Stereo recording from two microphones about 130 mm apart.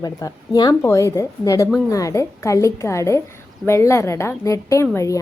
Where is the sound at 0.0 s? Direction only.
30° left (ahead or behind).